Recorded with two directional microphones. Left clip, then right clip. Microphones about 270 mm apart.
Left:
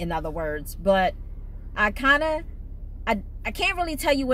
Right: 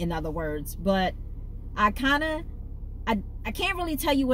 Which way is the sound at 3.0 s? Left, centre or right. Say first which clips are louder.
Left 3 dB; centre.